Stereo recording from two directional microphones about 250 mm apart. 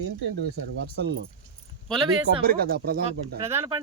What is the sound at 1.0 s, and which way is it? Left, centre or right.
Speech, right.